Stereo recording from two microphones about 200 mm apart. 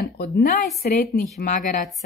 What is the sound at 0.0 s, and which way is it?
A woman's voice, 50° left (ahead or behind).